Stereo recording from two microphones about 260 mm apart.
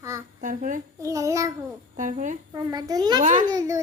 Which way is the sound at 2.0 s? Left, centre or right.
Right.